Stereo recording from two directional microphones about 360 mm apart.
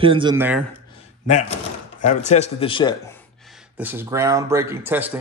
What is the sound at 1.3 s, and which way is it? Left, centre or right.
Speech, centre.